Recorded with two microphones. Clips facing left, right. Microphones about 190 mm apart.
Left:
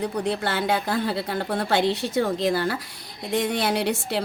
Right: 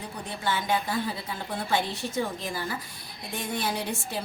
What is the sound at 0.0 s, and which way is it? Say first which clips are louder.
A woman's voice: left 8 dB; 70° left (ahead or behind).